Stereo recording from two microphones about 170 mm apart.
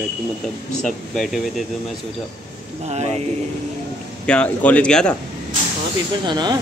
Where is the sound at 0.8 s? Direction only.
5° left (ahead or behind).